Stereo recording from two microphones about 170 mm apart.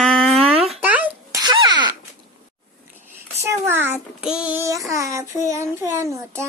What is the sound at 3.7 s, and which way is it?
Child singing, 10° right (ahead or behind).